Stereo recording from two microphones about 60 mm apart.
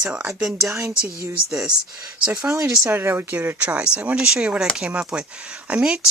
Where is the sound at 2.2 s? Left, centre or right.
Centre.